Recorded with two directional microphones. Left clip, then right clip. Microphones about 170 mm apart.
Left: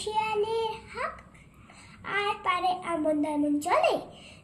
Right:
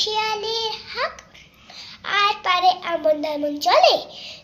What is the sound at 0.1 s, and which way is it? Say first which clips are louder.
Child singing: right 5 dB; 15° left (ahead or behind).